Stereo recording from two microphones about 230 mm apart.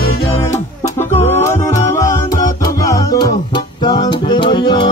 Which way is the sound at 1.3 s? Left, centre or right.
Centre.